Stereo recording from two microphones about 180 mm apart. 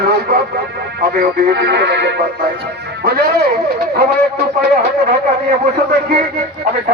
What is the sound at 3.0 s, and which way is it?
Speech, 60° right (ahead or behind).